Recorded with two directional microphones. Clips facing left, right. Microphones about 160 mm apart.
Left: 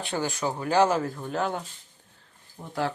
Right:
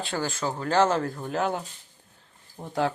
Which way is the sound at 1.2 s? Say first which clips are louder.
Right 1 dB; 5° right (ahead or behind).